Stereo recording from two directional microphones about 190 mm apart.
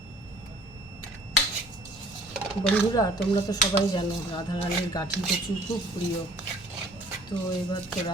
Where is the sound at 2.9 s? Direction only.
20° left (ahead or behind).